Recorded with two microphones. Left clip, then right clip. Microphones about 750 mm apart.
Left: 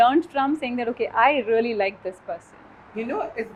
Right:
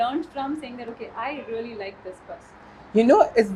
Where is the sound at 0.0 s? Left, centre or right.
Left.